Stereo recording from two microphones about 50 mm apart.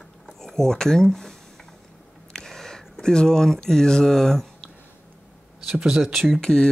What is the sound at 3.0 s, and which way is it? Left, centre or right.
Speech, centre.